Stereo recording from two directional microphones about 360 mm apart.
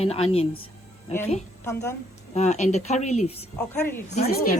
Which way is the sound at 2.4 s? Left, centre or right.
Centre.